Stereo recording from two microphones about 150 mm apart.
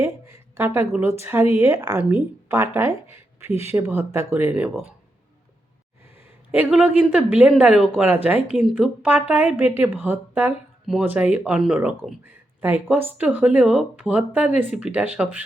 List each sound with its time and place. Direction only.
0.0 s a sound: 20° right (ahead or behind)
0.9 s speech: 15° right (ahead or behind)
6.5 s speech: 10° right (ahead or behind)